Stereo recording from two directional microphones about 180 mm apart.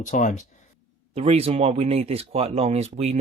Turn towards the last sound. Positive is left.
turn(degrees=-35)  # may be behind; listen again after turning